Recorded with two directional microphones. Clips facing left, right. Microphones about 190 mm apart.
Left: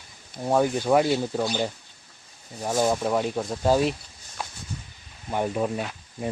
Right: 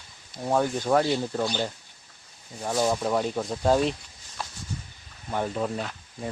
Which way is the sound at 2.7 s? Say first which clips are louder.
Left 1 dB; 10° left (ahead or behind).